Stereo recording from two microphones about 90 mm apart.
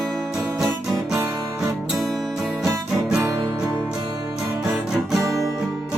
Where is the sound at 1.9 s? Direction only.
Centre (ahead or behind).